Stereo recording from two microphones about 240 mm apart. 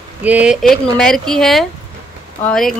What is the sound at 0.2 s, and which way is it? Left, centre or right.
Speech, centre.